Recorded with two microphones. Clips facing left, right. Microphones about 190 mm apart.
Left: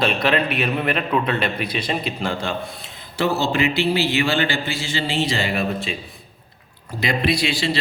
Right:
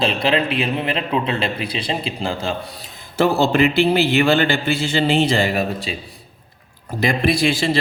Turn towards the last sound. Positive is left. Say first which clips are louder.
# right 3 dB
turn(degrees=-50)  # may be behind; listen again after turning